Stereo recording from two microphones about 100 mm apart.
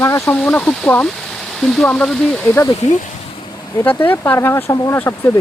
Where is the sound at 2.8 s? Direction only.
90° left.